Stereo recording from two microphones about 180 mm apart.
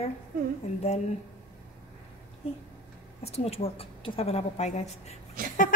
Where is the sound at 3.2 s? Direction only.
35° left (ahead or behind).